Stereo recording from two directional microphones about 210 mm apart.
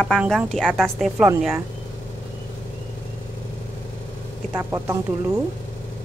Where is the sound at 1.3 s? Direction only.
15° right (ahead or behind).